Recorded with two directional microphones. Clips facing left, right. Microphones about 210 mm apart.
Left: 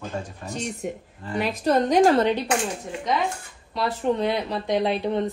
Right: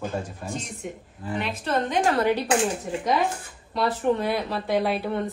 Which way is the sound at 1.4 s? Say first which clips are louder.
Left 6 dB; 40° left (ahead or behind).